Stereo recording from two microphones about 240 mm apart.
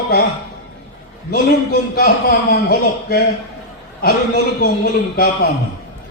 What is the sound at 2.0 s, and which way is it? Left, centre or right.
A man's voice, left.